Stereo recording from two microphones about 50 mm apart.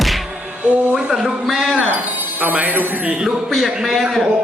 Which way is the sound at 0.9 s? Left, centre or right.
Centre.